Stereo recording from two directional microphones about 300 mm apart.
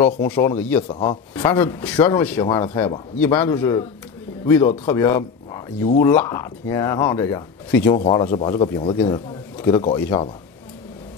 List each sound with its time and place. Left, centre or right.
0.3 s speech: centre
0.8 s speech: centre
1.5 s speech: centre